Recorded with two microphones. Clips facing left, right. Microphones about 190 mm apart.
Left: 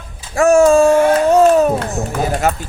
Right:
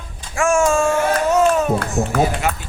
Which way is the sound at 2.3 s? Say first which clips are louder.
Left 5 dB; 45° left (ahead or behind).